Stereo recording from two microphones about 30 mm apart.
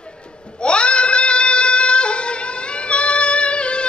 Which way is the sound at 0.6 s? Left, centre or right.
Left.